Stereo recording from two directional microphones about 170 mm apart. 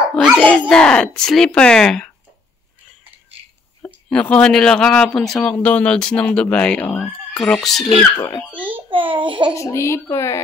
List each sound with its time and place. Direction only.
0.1 s a sound: centre (ahead or behind)
0.4 s speech: 5° left (ahead or behind)
3.8 s speech: 5° left (ahead or behind)
8.5 s babbling: 10° right (ahead or behind)
8.9 s a sound: 30° right (ahead or behind)
9.6 s speech: 15° left (ahead or behind)